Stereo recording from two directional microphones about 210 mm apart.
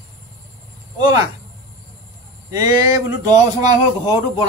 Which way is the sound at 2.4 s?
15° right (ahead or behind).